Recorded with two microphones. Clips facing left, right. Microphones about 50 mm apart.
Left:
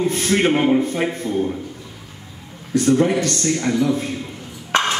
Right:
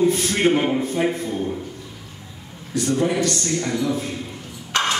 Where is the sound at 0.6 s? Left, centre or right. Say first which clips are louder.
Left 3 dB; centre.